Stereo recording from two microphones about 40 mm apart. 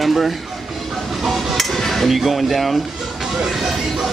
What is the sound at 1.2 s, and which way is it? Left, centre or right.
Dishes, centre.